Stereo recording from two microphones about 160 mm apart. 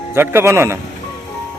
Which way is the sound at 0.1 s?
15° right (ahead or behind).